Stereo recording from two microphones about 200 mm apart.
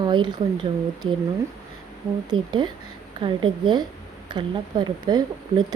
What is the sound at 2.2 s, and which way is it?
Speech, 20° right (ahead or behind).